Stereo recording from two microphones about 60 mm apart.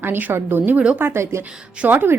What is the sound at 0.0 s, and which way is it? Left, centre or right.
A woman's voice, right.